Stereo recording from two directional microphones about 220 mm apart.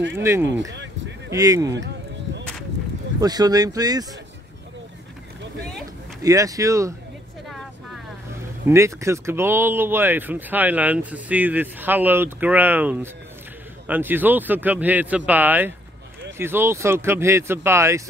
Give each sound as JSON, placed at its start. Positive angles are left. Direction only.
{"t": 0.1, "sound": "speech", "side_deg": -10}
{"t": 3.2, "sound": "speech", "side_deg": -15}
{"t": 6.2, "sound": "speech", "side_deg": -15}
{"t": 7.4, "sound": "vehicle", "side_deg": 0}
{"t": 8.6, "sound": "speech", "side_deg": -15}